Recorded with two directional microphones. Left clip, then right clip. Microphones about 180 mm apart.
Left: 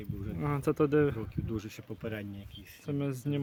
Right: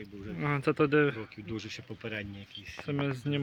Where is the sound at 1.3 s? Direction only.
70° left (ahead or behind); by 2.8 s 85° left.